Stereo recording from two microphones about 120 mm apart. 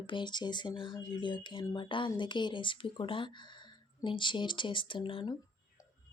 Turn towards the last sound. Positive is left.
turn(degrees=40)  # may be behind; listen again after turning